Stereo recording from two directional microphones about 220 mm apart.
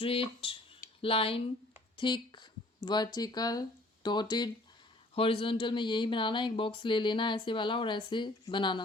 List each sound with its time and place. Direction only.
0.0 s speech: 25° left (ahead or behind)